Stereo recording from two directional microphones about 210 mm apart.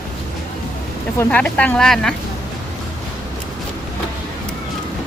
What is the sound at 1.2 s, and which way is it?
Speech, 5° left (ahead or behind).